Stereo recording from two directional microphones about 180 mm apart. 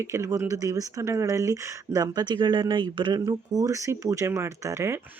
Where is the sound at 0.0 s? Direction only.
15° right (ahead or behind).